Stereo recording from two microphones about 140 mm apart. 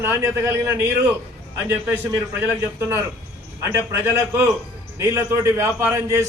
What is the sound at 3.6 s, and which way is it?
A man's voice, 15° right (ahead or behind).